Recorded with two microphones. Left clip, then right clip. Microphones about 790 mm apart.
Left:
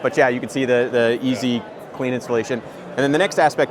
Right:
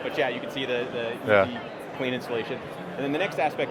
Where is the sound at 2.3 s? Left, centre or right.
Left.